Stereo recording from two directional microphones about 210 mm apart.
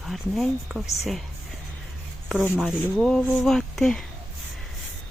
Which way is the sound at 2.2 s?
5° right (ahead or behind).